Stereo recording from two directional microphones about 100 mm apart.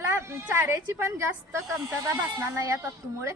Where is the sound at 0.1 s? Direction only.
25° right (ahead or behind).